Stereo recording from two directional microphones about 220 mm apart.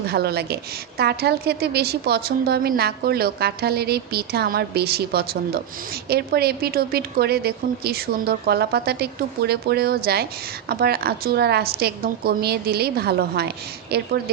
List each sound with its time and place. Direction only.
0.1 s a woman's voice: 45° right (ahead or behind)